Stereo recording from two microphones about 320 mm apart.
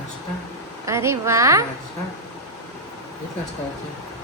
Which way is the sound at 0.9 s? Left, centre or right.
Centre.